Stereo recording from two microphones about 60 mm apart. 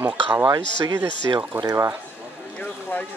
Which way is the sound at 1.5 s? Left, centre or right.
Right.